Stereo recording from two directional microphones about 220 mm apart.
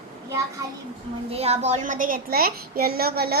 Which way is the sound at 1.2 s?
30° right (ahead or behind).